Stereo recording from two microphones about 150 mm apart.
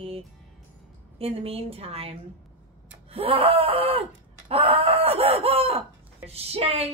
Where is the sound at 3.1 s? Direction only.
40° right (ahead or behind).